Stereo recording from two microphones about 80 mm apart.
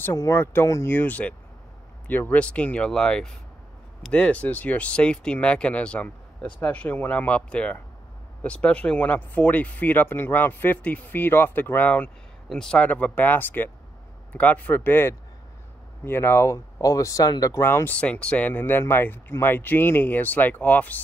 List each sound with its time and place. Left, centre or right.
0.0 s speech: left
12.4 s a man's voice: centre
12.8 s speech: centre; by 17.6 s left
17.6 s speech: left
17.9 s speech: centre